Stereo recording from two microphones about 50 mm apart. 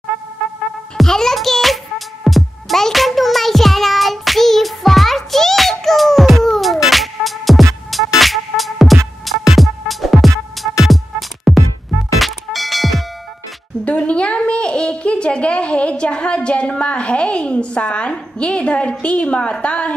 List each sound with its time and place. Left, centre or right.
0.9 s music: centre
13.8 s a sound: left
18.4 s a woman's voice: left